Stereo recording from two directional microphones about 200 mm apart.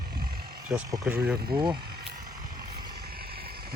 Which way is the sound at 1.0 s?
10° right (ahead or behind).